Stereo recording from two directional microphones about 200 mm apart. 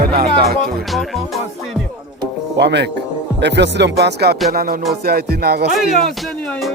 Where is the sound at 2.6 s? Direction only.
55° right (ahead or behind).